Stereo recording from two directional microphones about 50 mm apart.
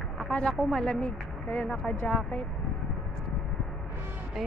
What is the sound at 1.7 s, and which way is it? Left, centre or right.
Speech, left.